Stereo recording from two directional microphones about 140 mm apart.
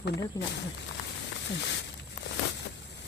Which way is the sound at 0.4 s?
25° left (ahead or behind).